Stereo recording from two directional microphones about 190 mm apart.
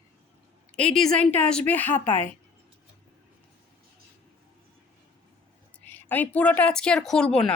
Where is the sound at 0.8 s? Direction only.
5° left (ahead or behind).